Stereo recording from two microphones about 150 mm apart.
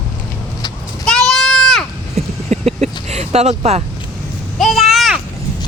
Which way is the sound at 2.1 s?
45° right (ahead or behind).